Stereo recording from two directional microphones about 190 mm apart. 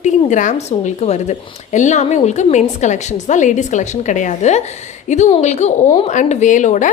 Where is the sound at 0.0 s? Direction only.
40° left (ahead or behind).